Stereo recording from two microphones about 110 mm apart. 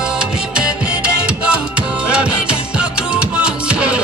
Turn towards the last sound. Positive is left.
turn(degrees=-10)  # may be behind; listen again after turning